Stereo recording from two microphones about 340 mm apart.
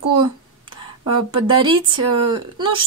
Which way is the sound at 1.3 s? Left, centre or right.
Centre.